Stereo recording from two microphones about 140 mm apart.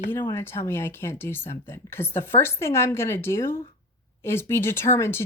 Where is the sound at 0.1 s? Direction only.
15° left (ahead or behind).